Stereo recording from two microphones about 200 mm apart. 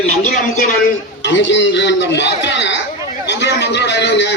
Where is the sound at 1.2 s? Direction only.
65° left (ahead or behind).